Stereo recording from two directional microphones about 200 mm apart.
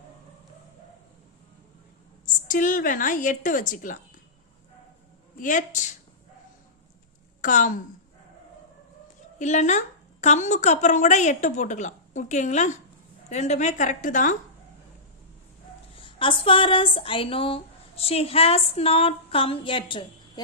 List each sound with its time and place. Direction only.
2.2 s a woman's voice: 40° left (ahead or behind)
5.4 s a woman's voice: 40° left (ahead or behind)
7.4 s a woman's voice: 40° left (ahead or behind)
9.4 s a woman's voice: 35° left (ahead or behind)
16.0 s speech: 25° left (ahead or behind)